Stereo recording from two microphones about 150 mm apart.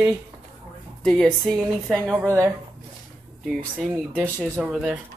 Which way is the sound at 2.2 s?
20° right (ahead or behind).